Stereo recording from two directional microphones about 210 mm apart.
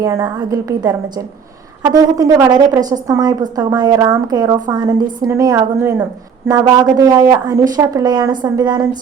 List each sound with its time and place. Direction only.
0.0 s a woman's voice: 15° right (ahead or behind)